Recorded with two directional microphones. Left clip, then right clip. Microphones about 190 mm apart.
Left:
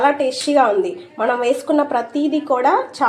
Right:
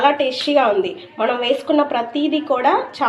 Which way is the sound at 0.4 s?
15° left (ahead or behind).